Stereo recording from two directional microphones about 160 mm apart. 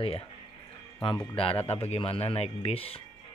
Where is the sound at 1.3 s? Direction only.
35° left (ahead or behind).